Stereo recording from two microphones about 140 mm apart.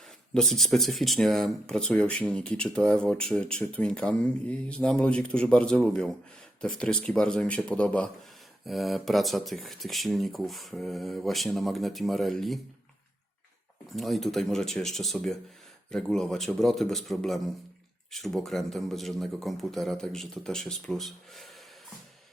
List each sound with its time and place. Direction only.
0.3 s speech: 5° left (ahead or behind)
13.9 s speech: centre (ahead or behind)